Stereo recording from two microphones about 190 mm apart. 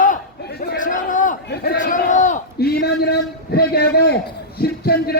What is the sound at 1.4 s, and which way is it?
Speech, 60° left (ahead or behind).